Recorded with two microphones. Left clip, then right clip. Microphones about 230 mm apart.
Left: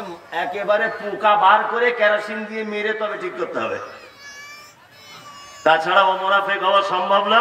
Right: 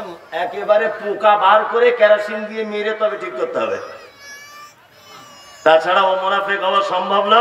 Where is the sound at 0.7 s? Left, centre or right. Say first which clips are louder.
Right 5 dB; right.